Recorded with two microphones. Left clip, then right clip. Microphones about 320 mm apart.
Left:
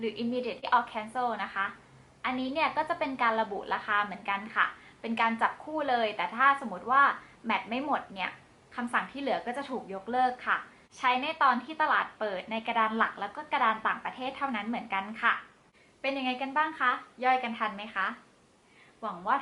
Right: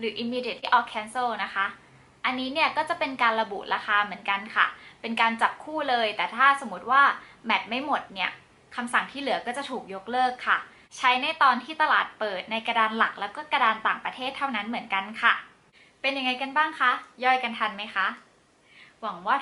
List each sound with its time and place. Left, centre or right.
0.0 s a woman's voice: centre
6.9 s a woman's voice: centre